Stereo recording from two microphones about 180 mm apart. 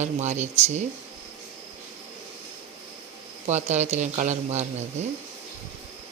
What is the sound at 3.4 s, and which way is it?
Speech, 40° right (ahead or behind).